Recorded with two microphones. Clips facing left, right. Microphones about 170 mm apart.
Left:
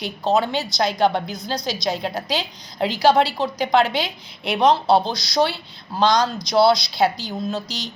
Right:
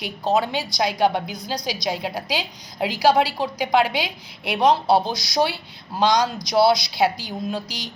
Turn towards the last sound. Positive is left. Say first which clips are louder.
# left 2 dB
turn(degrees=-10)  # may be behind; listen again after turning